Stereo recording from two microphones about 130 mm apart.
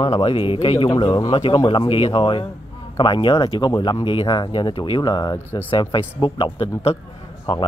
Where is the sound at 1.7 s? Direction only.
45° left (ahead or behind).